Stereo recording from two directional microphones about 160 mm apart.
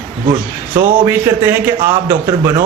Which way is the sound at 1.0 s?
15° right (ahead or behind).